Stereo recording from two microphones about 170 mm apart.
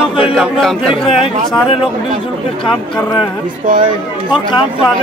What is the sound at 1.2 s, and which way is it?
Speech, 30° left (ahead or behind).